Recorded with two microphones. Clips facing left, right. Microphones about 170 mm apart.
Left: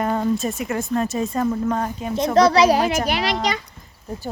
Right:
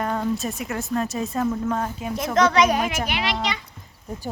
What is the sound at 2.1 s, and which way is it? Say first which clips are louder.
Speech: left 4 dB; 30° left (ahead or behind).